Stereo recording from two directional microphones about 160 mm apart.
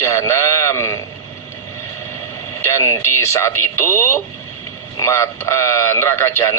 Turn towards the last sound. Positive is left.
turn(degrees=15)  # may be behind; listen again after turning